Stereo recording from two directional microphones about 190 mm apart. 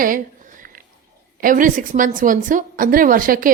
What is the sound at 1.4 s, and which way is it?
A woman's voice, 45° right (ahead or behind).